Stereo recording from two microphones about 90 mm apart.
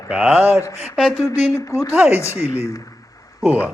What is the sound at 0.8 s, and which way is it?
Speech, 5° right (ahead or behind).